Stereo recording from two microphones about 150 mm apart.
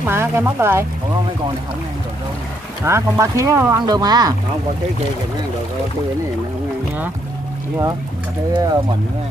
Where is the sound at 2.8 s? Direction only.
20° right (ahead or behind).